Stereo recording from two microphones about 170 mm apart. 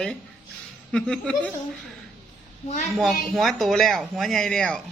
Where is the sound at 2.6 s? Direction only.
45° left (ahead or behind).